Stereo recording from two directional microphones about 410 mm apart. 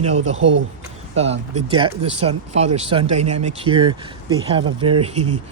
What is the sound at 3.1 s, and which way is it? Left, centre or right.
Speech, right.